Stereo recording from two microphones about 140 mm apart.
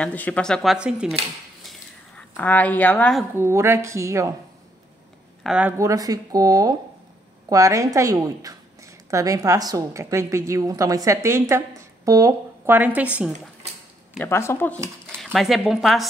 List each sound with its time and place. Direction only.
0.0 s speech: 10° left (ahead or behind)
1.7 s a sound: 10° left (ahead or behind)
3.3 s a woman's voice: 20° right (ahead or behind)
5.4 s speech: 5° right (ahead or behind)
5.8 s a woman's voice: 25° right (ahead or behind)
14.1 s speech: 15° left (ahead or behind)
15.0 s speech: 5° left (ahead or behind)